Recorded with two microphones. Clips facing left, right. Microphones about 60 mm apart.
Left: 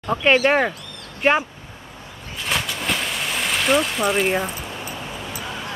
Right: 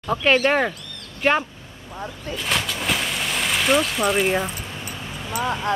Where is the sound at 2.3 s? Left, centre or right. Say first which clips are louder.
Even; centre.